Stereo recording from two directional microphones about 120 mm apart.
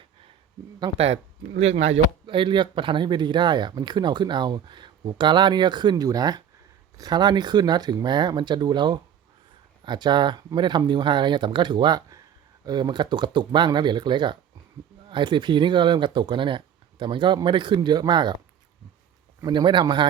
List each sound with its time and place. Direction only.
0.9 s speech: 60° right (ahead or behind)
2.2 s speech: 45° right (ahead or behind)
19.4 s speech: 35° right (ahead or behind)